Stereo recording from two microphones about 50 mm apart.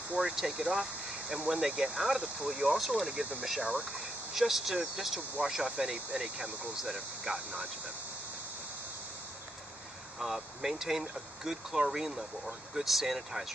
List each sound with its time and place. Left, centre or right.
0.2 s speech: centre
6.8 s speech: centre
10.1 s speech: centre